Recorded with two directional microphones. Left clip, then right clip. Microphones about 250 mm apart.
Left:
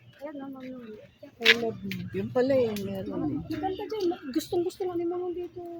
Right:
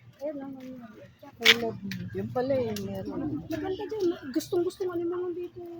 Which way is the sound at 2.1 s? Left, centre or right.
Left.